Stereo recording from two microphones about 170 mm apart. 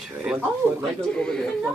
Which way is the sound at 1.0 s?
5° left (ahead or behind).